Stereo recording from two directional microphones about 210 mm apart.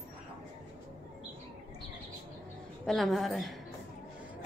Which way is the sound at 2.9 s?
Centre (ahead or behind).